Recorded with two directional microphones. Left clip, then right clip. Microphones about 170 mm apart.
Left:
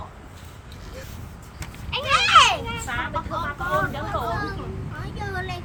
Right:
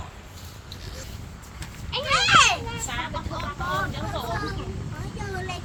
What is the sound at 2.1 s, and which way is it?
Children playing, 70° left (ahead or behind).